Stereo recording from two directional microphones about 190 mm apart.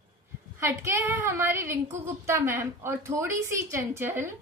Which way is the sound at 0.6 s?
15° right (ahead or behind).